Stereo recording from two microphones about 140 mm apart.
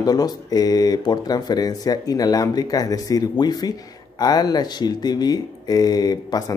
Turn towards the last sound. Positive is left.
turn(degrees=25)  # may be behind; listen again after turning